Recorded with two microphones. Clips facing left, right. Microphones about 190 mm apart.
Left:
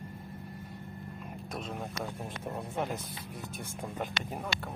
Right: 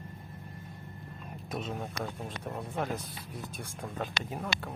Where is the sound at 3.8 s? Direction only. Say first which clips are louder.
Even; 15° left (ahead or behind).